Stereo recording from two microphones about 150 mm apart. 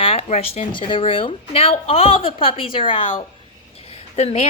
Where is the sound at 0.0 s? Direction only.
40° left (ahead or behind).